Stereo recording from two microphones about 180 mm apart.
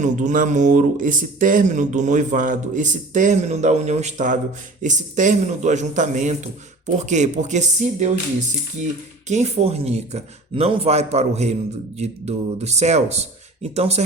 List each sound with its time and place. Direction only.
0.0 s a man's voice: 45° right (ahead or behind)
9.2 s speech: 40° right (ahead or behind)